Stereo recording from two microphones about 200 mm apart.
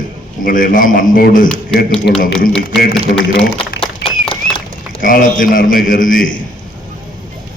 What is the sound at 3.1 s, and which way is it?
Speech, 45° left (ahead or behind).